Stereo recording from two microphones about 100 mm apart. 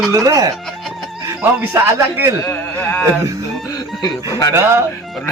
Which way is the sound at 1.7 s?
25° right (ahead or behind).